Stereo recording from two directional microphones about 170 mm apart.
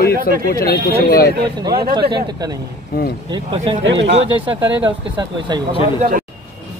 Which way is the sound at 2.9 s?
60° left (ahead or behind).